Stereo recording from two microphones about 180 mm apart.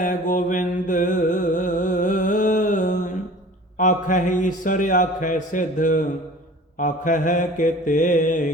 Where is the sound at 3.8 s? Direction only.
45° left (ahead or behind).